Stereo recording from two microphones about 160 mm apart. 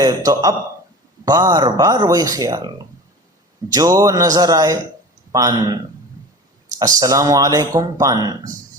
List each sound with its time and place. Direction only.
0.0 s speech: 25° right (ahead or behind)
6.7 s speech: 20° right (ahead or behind)